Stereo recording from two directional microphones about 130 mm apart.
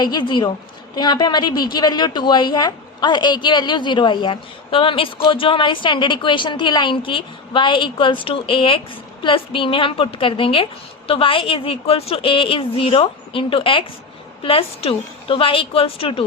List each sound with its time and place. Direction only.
0.0 s a woman's voice: 35° left (ahead or behind)